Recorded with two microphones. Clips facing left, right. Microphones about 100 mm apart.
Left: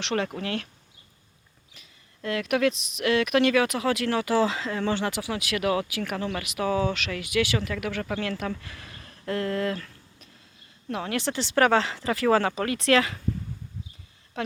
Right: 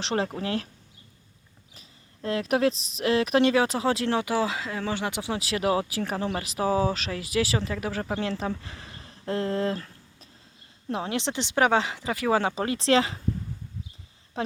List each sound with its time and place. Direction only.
0.0 s speech: 35° right (ahead or behind)
1.7 s speech: 35° right (ahead or behind)
4.4 s speech: 5° right (ahead or behind)
5.2 s speech: 30° right (ahead or behind)
14.4 s speech: 30° right (ahead or behind)